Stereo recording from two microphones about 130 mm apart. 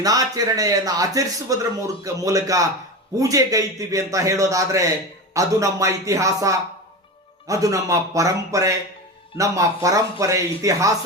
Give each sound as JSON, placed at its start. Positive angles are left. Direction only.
{"t": 0.0, "sound": "a man's voice", "side_deg": -30}